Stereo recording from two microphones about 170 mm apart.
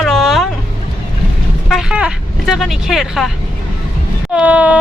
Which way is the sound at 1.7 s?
Centre (ahead or behind).